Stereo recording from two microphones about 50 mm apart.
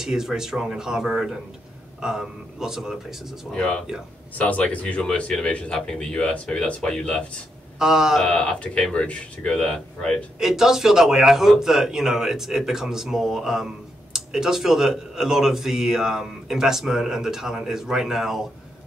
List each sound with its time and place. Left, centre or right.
0.0 s a man's voice: centre
3.5 s speech: left
7.8 s a man's voice: centre
8.4 s speech: left
10.4 s a man's voice: centre